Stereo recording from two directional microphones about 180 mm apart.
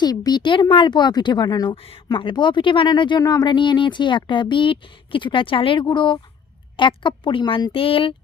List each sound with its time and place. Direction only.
0.0 s speech: 20° left (ahead or behind)